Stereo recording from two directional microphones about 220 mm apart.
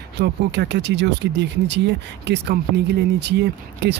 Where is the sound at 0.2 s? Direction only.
50° right (ahead or behind).